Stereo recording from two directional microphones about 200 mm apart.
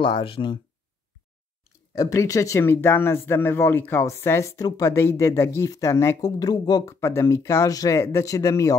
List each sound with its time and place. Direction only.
0.0 s speech: 25° left (ahead or behind)
2.0 s speech: 15° left (ahead or behind)